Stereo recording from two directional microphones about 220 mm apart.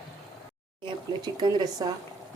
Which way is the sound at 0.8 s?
20° right (ahead or behind).